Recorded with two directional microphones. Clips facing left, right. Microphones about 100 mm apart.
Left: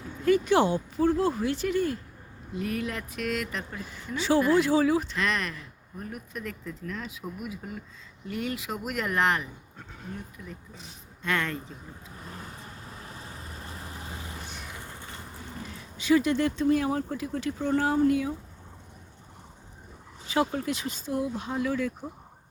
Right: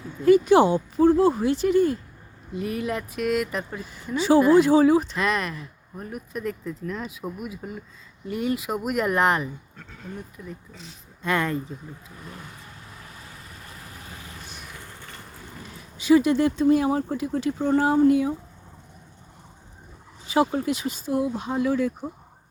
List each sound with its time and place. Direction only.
0.3 s speech: 15° right (ahead or behind)
12.2 s vehicle: 35° left (ahead or behind)
14.6 s a sound: 20° left (ahead or behind)
16.0 s speech: 15° right (ahead or behind)
20.2 s speech: 15° right (ahead or behind)